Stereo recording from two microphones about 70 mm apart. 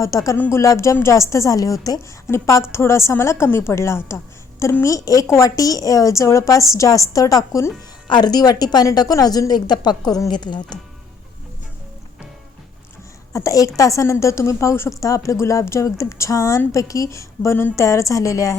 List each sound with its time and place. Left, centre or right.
0.0 s a woman's voice: left
2.3 s a woman's voice: left
4.8 s a woman's voice: left
8.1 s a woman's voice: left
13.3 s a woman's voice: left